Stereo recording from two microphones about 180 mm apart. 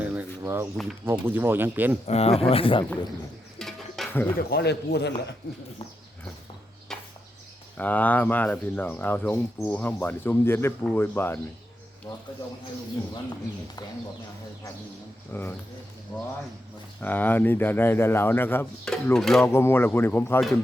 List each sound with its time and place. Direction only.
0.0 s a sound: 10° right (ahead or behind)
0.4 s speech: 15° right (ahead or behind)
2.0 s speech: 35° left (ahead or behind)
3.6 s tabla: centre (ahead or behind)
4.4 s a man's voice: 65° left (ahead or behind)
7.8 s speech: 10° left (ahead or behind)
15.3 s speech: 10° left (ahead or behind)
17.0 s speech: 10° left (ahead or behind)
19.5 s speech: 15° left (ahead or behind)